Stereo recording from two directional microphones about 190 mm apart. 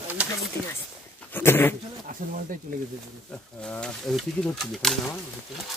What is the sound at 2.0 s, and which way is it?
Speech, 45° right (ahead or behind).